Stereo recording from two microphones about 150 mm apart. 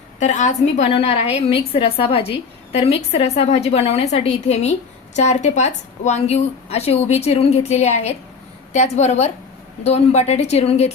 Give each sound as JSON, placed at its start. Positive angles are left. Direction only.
{"t": 0.2, "sound": "a woman's voice", "side_deg": 50}